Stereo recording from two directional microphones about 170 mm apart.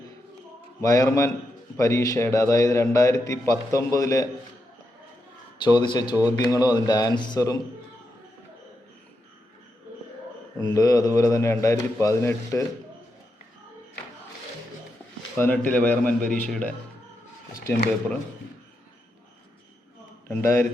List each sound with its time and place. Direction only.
0.8 s a man's voice: 20° left (ahead or behind)
5.6 s speech: 25° left (ahead or behind)
10.8 s speech: 20° left (ahead or behind)
15.4 s a man's voice: 10° left (ahead or behind)
20.2 s a man's voice: 15° left (ahead or behind)